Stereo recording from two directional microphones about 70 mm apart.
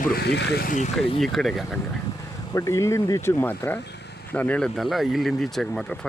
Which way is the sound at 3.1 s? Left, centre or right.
Left.